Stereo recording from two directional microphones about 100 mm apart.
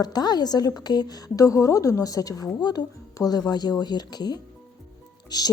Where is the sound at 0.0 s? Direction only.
45° left (ahead or behind).